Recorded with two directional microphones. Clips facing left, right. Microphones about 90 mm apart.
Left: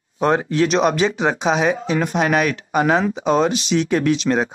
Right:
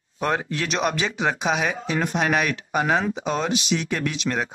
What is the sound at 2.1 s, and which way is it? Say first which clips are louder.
Speech: left 4 dB; centre (ahead or behind).